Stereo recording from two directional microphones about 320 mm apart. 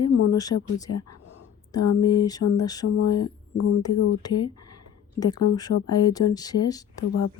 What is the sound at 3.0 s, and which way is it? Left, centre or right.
Speech, left.